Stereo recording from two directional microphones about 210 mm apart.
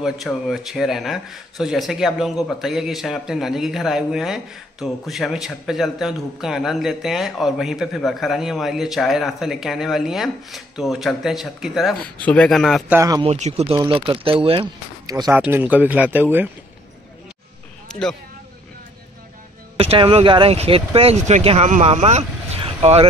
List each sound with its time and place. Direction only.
0.0 s a man's voice: centre (ahead or behind)
12.9 s a man's voice: 15° right (ahead or behind)
13.2 s a man's voice: 30° right (ahead or behind); by 16.4 s 10° right (ahead or behind)
17.8 s a sound: 5° left (ahead or behind)
19.8 s speech: 30° right (ahead or behind)